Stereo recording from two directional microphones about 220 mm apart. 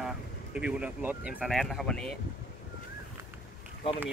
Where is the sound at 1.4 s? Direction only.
Centre (ahead or behind).